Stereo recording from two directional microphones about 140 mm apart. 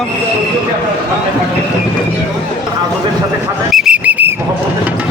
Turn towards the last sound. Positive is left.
turn(degrees=-10)  # may be behind; listen again after turning